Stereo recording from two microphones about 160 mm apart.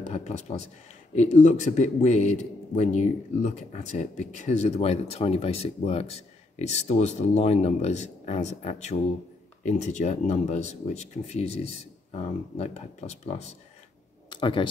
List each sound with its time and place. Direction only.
0.0 s a man's voice: 45° left (ahead or behind)
14.3 s speech: 30° left (ahead or behind)